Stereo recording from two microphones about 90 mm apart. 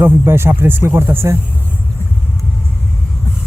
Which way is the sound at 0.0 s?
25° right (ahead or behind).